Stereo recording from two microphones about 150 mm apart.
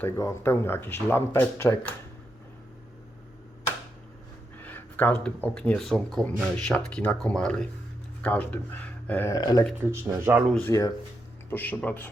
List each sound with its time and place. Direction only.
0.0 s speech: 15° left (ahead or behind)
4.5 s speech: 10° left (ahead or behind)
9.3 s speech: 25° left (ahead or behind)
9.8 s speech: 15° right (ahead or behind)
10.6 s speech: 20° left (ahead or behind)